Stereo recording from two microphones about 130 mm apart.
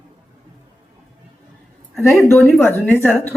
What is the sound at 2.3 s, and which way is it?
A woman's voice, 15° left (ahead or behind).